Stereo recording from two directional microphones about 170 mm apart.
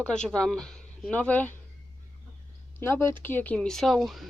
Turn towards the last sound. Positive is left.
turn(degrees=0)  # may be behind; listen again after turning